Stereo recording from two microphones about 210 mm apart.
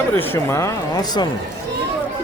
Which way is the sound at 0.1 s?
10° left (ahead or behind).